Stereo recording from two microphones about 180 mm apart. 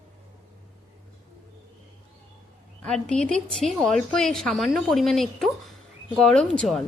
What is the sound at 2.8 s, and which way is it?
A woman's voice, 5° left (ahead or behind).